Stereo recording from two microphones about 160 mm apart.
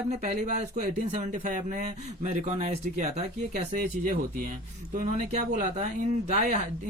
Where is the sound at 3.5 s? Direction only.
60° right (ahead or behind).